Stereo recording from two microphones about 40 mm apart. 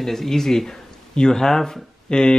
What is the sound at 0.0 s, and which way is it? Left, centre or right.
Speech, centre.